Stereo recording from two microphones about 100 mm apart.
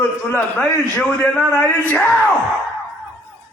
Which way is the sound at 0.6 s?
10° left (ahead or behind).